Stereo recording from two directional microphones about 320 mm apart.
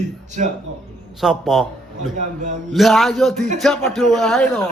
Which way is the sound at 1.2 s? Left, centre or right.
Centre.